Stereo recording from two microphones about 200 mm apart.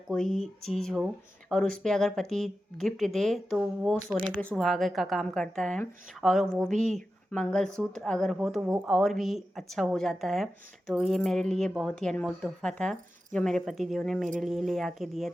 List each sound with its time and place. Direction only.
0.1 s speech: 5° left (ahead or behind)